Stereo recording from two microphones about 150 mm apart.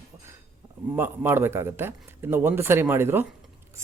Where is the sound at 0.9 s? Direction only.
15° right (ahead or behind).